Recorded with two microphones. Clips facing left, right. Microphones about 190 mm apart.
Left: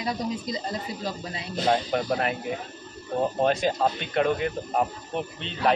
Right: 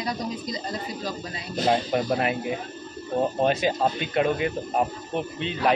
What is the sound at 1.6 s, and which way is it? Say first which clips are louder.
Speech: right 1 dB; 5° right (ahead or behind).